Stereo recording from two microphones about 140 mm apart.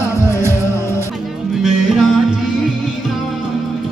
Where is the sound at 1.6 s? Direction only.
5° right (ahead or behind).